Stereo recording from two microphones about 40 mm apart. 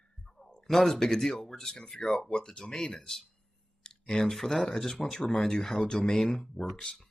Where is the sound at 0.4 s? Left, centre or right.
Centre.